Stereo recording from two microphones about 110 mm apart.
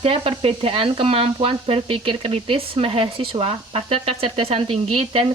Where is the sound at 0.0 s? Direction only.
60° right (ahead or behind).